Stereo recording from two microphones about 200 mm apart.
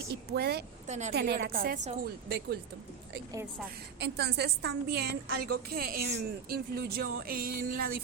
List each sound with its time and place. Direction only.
0.1 s speech: 50° right (ahead or behind)
0.9 s a woman's voice: 35° right (ahead or behind)
1.1 s a woman's voice: 50° right (ahead or behind)
4.0 s a woman's voice: 55° right (ahead or behind)